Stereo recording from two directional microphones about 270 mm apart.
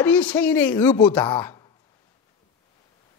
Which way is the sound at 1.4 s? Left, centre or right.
Centre.